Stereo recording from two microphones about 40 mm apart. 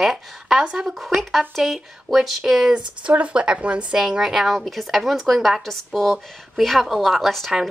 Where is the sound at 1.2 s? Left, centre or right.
Centre.